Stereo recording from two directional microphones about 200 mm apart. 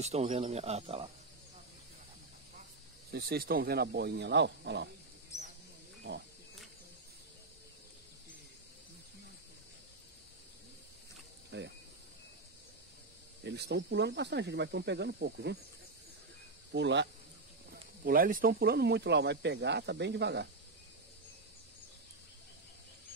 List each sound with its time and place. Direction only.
0.0 s speech: 35° right (ahead or behind)
3.1 s speech: 55° right (ahead or behind)
11.5 s speech: 60° right (ahead or behind)
13.4 s speech: 60° right (ahead or behind)
16.7 s speech: 60° right (ahead or behind)
18.0 s speech: 45° right (ahead or behind)